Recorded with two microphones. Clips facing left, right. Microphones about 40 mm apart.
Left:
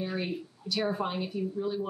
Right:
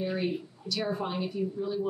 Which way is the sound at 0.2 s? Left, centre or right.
Centre.